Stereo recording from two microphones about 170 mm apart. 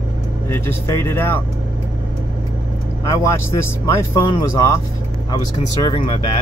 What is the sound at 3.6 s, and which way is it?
Speech, 15° left (ahead or behind).